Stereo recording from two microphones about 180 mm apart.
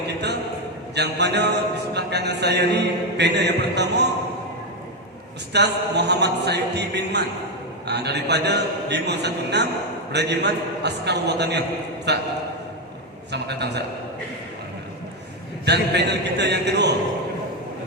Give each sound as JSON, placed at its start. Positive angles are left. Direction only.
{"t": 0.9, "sound": "a man's voice", "side_deg": -70}
{"t": 5.5, "sound": "a man's voice", "side_deg": -70}
{"t": 13.3, "sound": "a man's voice", "side_deg": -70}
{"t": 15.6, "sound": "a man's voice", "side_deg": -70}